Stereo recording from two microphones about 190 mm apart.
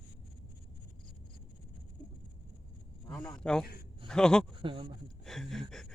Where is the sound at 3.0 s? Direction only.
15° left (ahead or behind).